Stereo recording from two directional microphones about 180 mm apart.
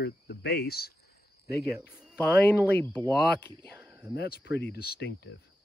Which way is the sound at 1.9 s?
5° right (ahead or behind).